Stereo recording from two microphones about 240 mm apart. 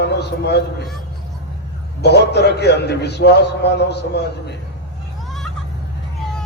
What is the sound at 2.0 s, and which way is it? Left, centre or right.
A man's voice, left.